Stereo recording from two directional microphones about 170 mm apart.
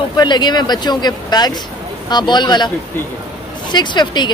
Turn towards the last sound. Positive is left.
turn(degrees=25)  # may be behind; listen again after turning